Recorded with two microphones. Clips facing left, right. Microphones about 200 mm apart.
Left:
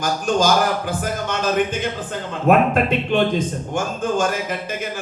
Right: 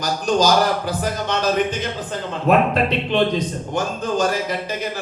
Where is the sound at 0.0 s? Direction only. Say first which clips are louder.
Even; 50° left (ahead or behind).